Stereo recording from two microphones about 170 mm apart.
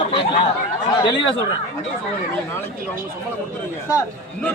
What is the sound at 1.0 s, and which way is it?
Speech, 30° left (ahead or behind).